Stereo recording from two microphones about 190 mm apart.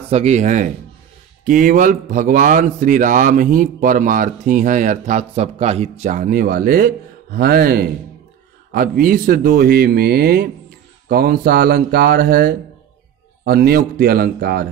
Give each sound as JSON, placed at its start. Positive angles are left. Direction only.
{"t": 0.1, "sound": "a man's voice", "side_deg": -35}